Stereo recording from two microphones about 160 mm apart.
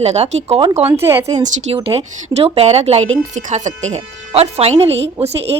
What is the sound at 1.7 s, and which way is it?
A woman's voice, 35° right (ahead or behind).